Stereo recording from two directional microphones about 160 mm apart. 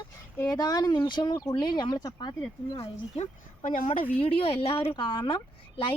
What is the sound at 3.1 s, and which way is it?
Speech, 50° left (ahead or behind).